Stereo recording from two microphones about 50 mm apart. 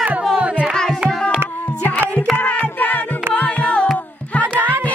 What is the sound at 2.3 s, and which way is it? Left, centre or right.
Music, left.